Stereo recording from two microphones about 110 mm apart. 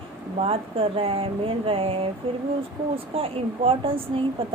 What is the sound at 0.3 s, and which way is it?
Speech, 60° right (ahead or behind).